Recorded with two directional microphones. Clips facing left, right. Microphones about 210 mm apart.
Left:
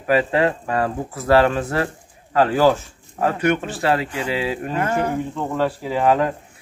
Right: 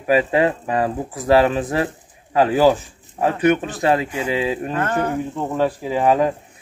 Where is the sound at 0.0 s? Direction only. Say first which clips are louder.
Right 1 dB; 15° right (ahead or behind).